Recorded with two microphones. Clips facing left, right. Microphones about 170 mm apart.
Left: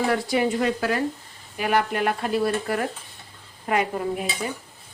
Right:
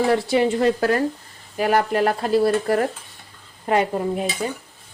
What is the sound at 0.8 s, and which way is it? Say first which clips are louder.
Speech: right 4 dB; 45° right (ahead or behind).